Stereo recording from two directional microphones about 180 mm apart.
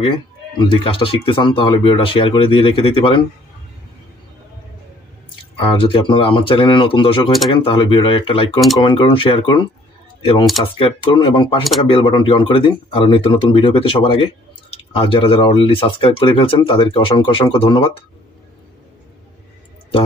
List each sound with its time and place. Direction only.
0.0 s speech: 30° left (ahead or behind)
5.6 s speech: 30° left (ahead or behind)
10.8 s speech: 30° left (ahead or behind)